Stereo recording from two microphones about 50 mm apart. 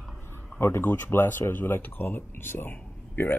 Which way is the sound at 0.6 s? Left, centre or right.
Left.